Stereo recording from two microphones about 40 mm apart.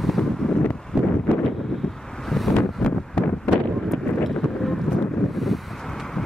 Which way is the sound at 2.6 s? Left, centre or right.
Left.